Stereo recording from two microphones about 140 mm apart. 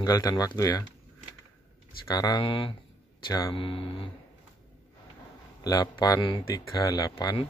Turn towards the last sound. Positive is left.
turn(degrees=25)  # may be behind; listen again after turning